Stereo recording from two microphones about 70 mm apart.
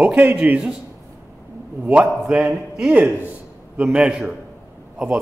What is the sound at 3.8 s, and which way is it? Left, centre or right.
Speech, centre.